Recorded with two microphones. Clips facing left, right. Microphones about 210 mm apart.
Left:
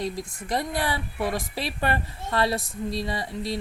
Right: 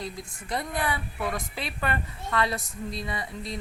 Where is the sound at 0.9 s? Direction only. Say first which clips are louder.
Left 3 dB; 35° left (ahead or behind).